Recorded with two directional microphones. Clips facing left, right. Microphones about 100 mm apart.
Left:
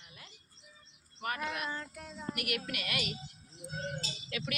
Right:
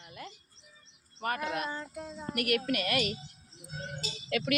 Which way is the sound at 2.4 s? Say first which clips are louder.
Right 11 dB; 45° right (ahead or behind).